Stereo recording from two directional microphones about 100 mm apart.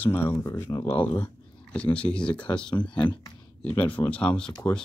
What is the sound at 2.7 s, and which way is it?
Speech, 50° left (ahead or behind).